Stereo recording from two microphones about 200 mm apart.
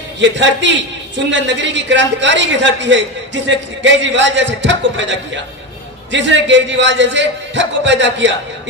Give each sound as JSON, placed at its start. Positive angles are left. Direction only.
{"t": 0.2, "sound": "a man's voice", "side_deg": -65}